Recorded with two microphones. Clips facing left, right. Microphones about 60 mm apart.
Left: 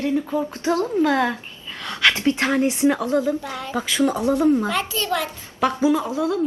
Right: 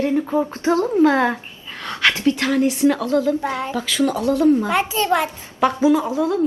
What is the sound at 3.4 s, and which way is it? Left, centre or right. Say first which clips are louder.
Speech: right 7 dB; right.